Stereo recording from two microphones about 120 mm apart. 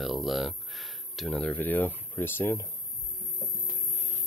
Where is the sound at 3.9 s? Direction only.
20° left (ahead or behind).